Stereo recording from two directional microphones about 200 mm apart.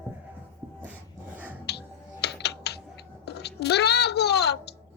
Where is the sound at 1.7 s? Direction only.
55° left (ahead or behind).